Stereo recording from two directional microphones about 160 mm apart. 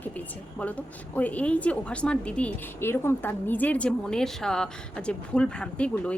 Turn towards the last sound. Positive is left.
turn(degrees=5)  # may be behind; listen again after turning